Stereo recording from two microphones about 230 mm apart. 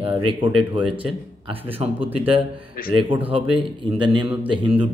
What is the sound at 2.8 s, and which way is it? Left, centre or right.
Speech, left.